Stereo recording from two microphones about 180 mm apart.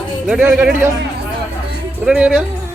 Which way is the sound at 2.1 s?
5° right (ahead or behind).